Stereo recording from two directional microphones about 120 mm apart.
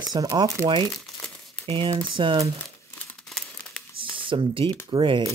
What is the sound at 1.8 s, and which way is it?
Speech, 45° right (ahead or behind).